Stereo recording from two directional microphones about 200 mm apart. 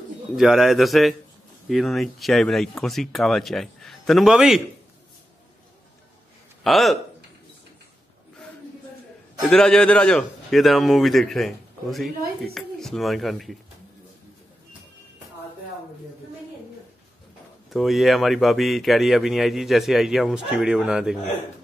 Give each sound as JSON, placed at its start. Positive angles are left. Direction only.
{"t": 0.4, "sound": "speech", "side_deg": 0}
{"t": 6.6, "sound": "speech", "side_deg": 0}
{"t": 9.5, "sound": "speech", "side_deg": 5}
{"t": 17.6, "sound": "speech", "side_deg": 0}